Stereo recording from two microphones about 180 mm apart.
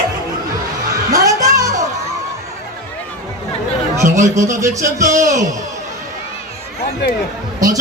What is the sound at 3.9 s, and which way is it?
A man's voice, 15° right (ahead or behind).